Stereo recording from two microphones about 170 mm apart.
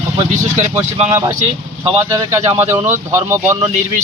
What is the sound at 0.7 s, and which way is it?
Speech, 10° right (ahead or behind).